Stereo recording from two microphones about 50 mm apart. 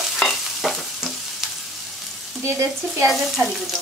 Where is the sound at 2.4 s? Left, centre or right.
Right.